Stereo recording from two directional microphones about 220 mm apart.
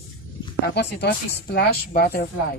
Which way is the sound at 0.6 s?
50° left (ahead or behind).